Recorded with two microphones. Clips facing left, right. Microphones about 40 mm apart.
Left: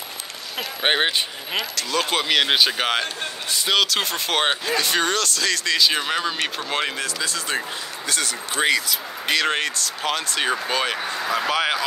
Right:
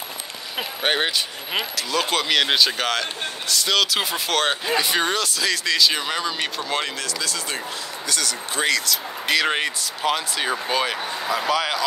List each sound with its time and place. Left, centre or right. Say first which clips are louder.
0.8 s speech: left 2 dB; centre
1.8 s speech: even; centre
3.8 s speech: even; centre
4.3 s speech: left 1 dB; left
4.6 s speech: even; centre
5.8 s speech: even; centre
9.3 s speech: even; centre
11.5 s speech: left 1 dB; centre